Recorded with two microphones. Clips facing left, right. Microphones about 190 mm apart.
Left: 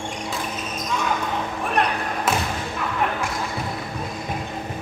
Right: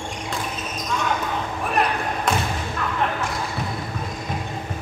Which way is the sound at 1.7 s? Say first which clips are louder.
Right 1 dB; centre (ahead or behind).